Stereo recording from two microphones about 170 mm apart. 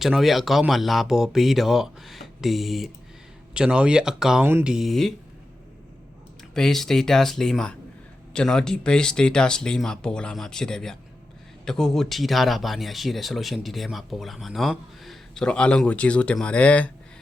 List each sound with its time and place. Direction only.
0.0 s speech: centre (ahead or behind)
6.5 s speech: centre (ahead or behind)